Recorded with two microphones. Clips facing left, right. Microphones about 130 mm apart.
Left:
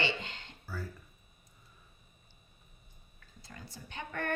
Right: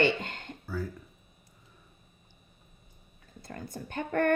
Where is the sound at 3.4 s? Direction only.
50° right (ahead or behind).